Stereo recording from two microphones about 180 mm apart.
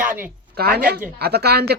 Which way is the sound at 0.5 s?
60° right (ahead or behind).